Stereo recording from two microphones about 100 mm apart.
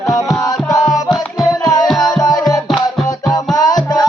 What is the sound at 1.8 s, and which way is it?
Music, 5° left (ahead or behind).